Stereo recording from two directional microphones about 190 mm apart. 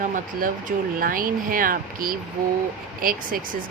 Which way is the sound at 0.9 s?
50° right (ahead or behind).